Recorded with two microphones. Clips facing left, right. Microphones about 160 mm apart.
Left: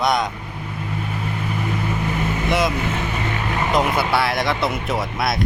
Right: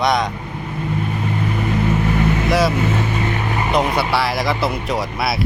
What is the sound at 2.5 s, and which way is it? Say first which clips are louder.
Speech: right 2 dB; centre (ahead or behind).